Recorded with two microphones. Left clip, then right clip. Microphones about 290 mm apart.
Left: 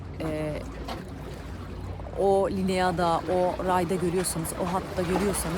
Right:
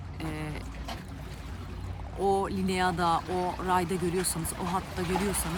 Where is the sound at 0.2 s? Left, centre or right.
Centre.